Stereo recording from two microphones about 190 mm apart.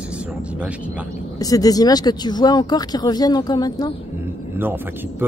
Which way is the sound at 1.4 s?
20° left (ahead or behind).